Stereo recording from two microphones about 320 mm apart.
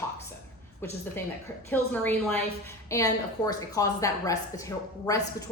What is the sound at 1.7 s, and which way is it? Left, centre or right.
A woman's voice, centre.